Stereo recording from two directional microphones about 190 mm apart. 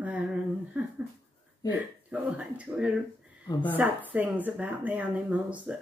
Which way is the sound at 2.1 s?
5° right (ahead or behind).